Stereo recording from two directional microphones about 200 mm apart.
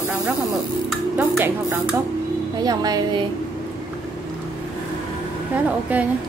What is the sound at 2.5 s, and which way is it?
Speech, 20° right (ahead or behind).